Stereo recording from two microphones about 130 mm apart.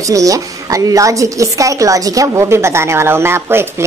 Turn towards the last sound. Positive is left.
turn(degrees=-20)  # may be behind; listen again after turning